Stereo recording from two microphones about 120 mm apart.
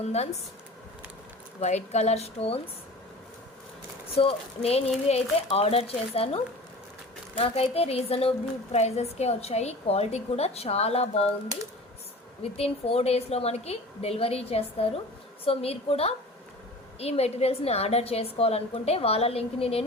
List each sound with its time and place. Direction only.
0.0 s a woman's voice: 65° left (ahead or behind)
1.6 s a woman's voice: 70° left (ahead or behind)
4.1 s a woman's voice: 50° left (ahead or behind)
12.4 s a woman's voice: 55° left (ahead or behind)